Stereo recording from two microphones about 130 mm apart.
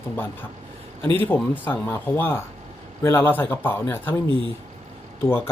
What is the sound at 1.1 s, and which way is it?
Speech, 15° left (ahead or behind).